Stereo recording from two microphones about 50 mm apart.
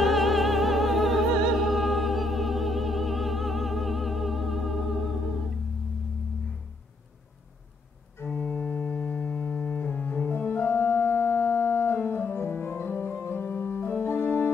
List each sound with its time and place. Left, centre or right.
0.0 s music: centre
8.4 s music: left
10.3 s organ: left